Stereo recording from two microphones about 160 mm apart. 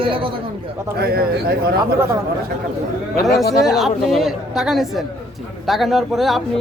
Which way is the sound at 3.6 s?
Centre (ahead or behind).